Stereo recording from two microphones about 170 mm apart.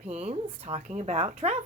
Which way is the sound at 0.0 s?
40° right (ahead or behind).